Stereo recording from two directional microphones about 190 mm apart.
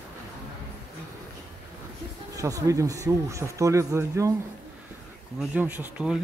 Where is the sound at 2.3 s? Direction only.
15° right (ahead or behind).